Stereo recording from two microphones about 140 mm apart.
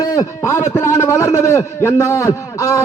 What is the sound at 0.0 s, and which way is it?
A man's voice, 25° left (ahead or behind).